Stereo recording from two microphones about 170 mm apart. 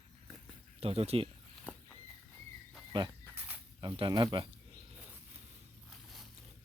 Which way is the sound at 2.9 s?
30° right (ahead or behind).